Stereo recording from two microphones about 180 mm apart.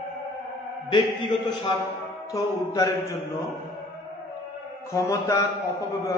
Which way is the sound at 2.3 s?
20° left (ahead or behind).